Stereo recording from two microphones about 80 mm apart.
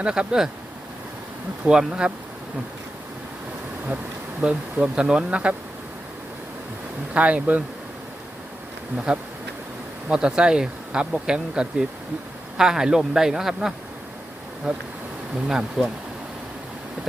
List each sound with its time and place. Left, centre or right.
0.0 s speech: centre
1.6 s speech: centre
4.4 s speech: centre
7.1 s speech: centre
9.1 s speech: centre